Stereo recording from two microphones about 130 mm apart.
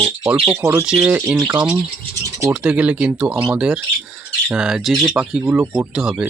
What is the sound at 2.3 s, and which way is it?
Bird, 20° right (ahead or behind).